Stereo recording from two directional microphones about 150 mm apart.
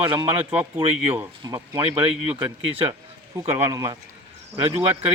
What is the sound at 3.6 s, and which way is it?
Speech, 25° right (ahead or behind).